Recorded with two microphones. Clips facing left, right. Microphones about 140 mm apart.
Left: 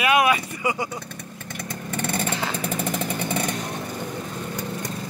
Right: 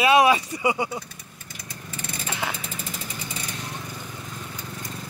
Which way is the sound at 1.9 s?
60° left (ahead or behind).